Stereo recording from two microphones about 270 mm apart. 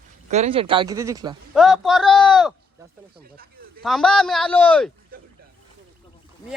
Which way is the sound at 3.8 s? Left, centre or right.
Centre.